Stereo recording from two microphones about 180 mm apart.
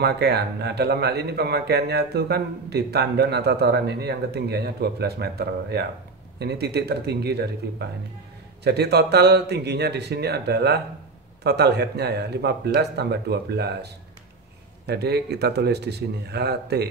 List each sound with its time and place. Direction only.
0.0 s a man's voice: 65° right (ahead or behind)